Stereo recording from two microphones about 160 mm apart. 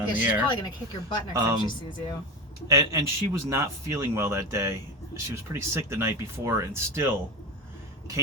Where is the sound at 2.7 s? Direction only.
20° right (ahead or behind).